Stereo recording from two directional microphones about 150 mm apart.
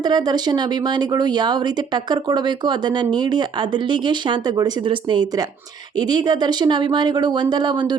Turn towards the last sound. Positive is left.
turn(degrees=-30)  # may be behind; listen again after turning